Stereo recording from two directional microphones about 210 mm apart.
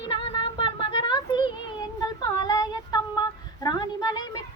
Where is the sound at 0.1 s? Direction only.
25° left (ahead or behind).